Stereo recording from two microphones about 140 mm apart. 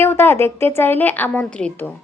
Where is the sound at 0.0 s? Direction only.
15° left (ahead or behind).